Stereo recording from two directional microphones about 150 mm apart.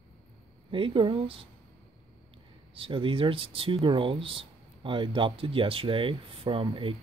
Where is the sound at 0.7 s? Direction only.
35° right (ahead or behind).